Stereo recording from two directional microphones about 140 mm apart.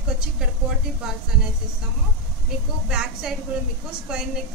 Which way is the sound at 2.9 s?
5° right (ahead or behind).